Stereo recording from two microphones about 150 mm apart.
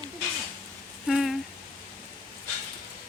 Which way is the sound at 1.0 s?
Centre (ahead or behind).